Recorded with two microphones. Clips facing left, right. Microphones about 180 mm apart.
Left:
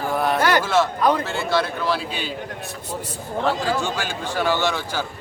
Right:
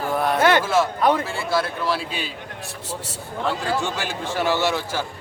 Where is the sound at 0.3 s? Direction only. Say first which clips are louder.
Right 3 dB; 25° right (ahead or behind).